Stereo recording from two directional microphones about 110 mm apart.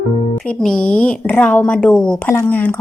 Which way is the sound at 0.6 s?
5° left (ahead or behind).